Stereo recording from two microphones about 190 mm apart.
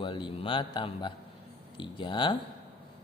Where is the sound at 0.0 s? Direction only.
25° left (ahead or behind).